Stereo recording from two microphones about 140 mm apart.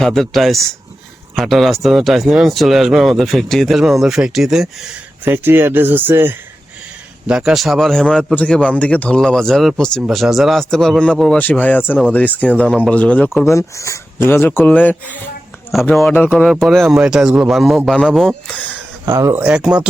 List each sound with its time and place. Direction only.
0.0 s speech: centre (ahead or behind)
5.2 s speech: 15° right (ahead or behind); by 13.3 s 10° left (ahead or behind)
13.5 s speech: 20° left (ahead or behind)
15.7 s speech: centre (ahead or behind)
19.0 s speech: 20° right (ahead or behind)
19.5 s speech: 5° right (ahead or behind)